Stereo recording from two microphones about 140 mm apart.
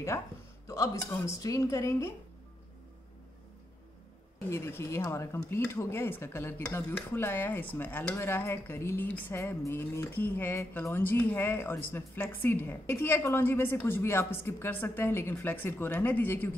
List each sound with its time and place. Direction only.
0.7 s speech: 20° left (ahead or behind)
4.5 s speech: 20° left (ahead or behind)